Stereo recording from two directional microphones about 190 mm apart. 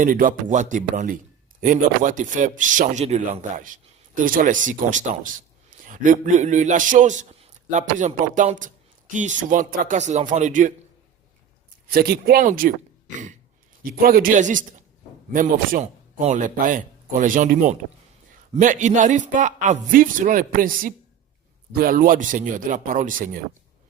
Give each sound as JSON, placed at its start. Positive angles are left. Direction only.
{"t": 0.0, "sound": "a man's voice", "side_deg": -45}
{"t": 11.9, "sound": "speech", "side_deg": -55}
{"t": 14.0, "sound": "a man's voice", "side_deg": -50}